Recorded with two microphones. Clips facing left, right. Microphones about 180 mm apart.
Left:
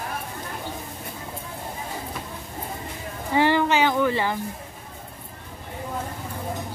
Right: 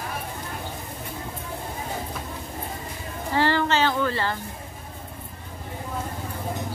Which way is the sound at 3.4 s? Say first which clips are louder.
Left 2 dB; 15° left (ahead or behind).